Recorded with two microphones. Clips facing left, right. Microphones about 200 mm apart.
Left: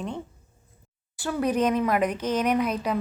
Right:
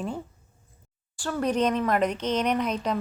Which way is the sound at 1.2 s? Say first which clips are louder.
Left 1 dB; 10° left (ahead or behind).